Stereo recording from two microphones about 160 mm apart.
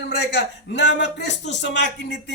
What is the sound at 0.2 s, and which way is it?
Speech, 90° left.